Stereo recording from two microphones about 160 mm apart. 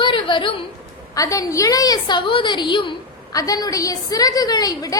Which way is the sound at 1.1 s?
20° left (ahead or behind).